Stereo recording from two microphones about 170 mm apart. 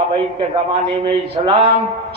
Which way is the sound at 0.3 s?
30° right (ahead or behind).